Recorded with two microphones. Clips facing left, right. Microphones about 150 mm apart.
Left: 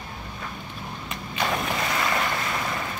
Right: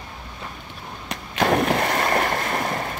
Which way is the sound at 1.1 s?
65° right (ahead or behind).